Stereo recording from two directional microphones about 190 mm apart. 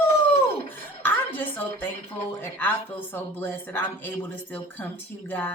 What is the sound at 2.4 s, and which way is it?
Speech, 10° left (ahead or behind).